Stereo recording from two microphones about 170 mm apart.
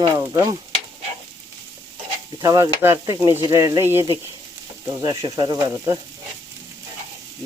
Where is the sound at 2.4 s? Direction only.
20° right (ahead or behind).